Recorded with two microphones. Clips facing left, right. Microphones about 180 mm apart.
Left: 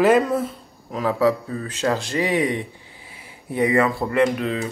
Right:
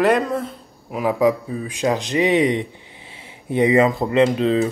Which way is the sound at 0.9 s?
15° right (ahead or behind).